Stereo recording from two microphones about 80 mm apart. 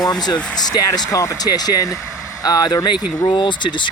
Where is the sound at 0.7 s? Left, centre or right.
Left.